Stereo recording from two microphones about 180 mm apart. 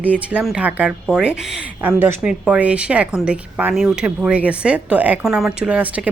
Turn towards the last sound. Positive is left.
turn(degrees=-5)  # may be behind; listen again after turning